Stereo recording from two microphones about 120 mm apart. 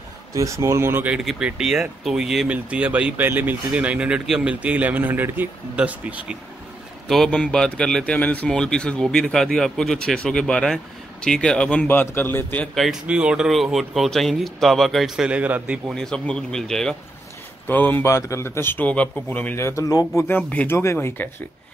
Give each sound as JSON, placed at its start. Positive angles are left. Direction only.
{"t": 0.3, "sound": "speech", "side_deg": -25}
{"t": 1.1, "sound": "speech", "side_deg": -5}
{"t": 7.1, "sound": "speech", "side_deg": 5}
{"t": 13.0, "sound": "speech", "side_deg": -10}
{"t": 15.9, "sound": "speech", "side_deg": 5}
{"t": 17.6, "sound": "a man's voice", "side_deg": 15}
{"t": 20.2, "sound": "speech", "side_deg": 15}